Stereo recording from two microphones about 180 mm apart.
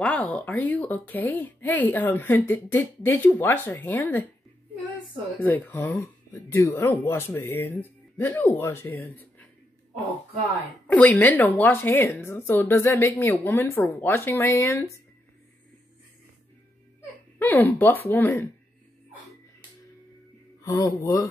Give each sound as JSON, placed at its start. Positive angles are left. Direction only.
{"t": 0.0, "sound": "a woman's voice", "side_deg": 5}
{"t": 5.4, "sound": "a woman's voice", "side_deg": 10}
{"t": 10.9, "sound": "a woman's voice", "side_deg": 10}
{"t": 17.4, "sound": "a woman's voice", "side_deg": 10}
{"t": 20.6, "sound": "speech", "side_deg": 20}